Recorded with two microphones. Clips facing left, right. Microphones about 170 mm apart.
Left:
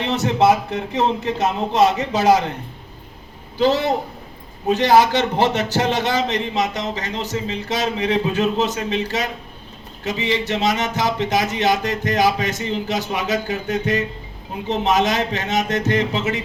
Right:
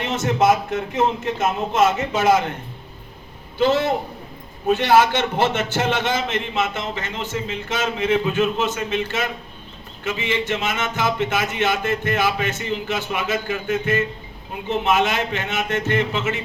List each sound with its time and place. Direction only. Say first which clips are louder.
0.0 s a man's voice: left 2 dB; 35° left (ahead or behind)
3.6 s a man's voice: left 1 dB; 35° left (ahead or behind)